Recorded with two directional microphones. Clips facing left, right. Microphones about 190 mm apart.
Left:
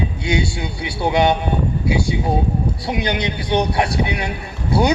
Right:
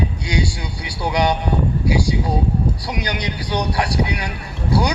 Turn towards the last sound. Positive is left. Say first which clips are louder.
# left 2 dB
turn(degrees=25)  # may be behind; listen again after turning